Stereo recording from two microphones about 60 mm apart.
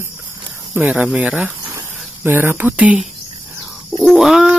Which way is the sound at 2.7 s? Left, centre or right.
Right.